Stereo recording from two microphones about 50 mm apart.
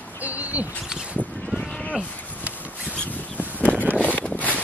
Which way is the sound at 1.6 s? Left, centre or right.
Centre.